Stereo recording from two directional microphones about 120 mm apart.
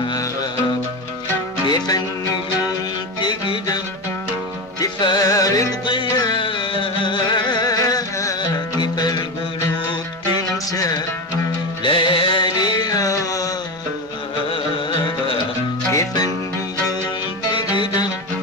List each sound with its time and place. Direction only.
0.0 s music: 35° left (ahead or behind)
1.7 s music: 35° left (ahead or behind)
11.8 s music: 45° left (ahead or behind); by 13.5 s 30° left (ahead or behind)
14.5 s carnatic music: 50° left (ahead or behind)
15.9 s music: 25° left (ahead or behind)
17.5 s music: 40° left (ahead or behind)